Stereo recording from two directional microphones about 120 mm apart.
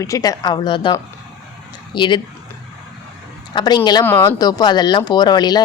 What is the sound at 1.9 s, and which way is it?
Speech, 40° left (ahead or behind).